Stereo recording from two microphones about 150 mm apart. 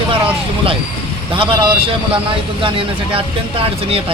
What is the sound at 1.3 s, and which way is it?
Speech, 35° right (ahead or behind).